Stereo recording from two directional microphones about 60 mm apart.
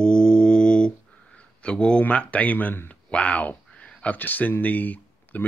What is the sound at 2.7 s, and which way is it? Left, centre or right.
Speech, left.